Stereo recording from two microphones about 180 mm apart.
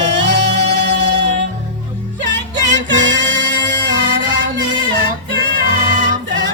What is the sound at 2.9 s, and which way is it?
Music, 90° right.